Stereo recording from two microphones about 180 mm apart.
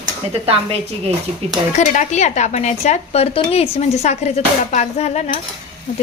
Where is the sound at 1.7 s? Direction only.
40° left (ahead or behind).